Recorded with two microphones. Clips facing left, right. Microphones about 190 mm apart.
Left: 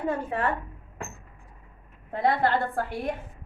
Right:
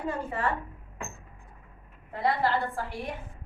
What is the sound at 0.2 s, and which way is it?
Speech, 60° left (ahead or behind).